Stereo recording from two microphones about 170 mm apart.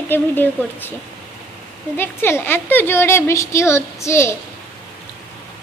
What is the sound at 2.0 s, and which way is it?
A woman's voice, 15° left (ahead or behind).